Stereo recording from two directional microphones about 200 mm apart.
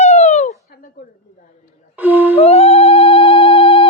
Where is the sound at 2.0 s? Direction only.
10° right (ahead or behind).